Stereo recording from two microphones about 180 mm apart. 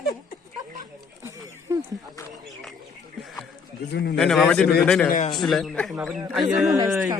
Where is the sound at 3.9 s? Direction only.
70° left (ahead or behind).